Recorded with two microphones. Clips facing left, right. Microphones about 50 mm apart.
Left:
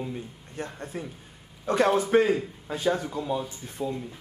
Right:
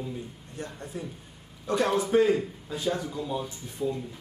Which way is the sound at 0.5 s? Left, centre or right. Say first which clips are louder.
Left 3 dB; left.